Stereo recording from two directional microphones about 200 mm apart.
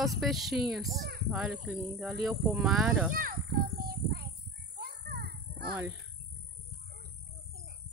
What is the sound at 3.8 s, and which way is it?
Child singing, 50° right (ahead or behind).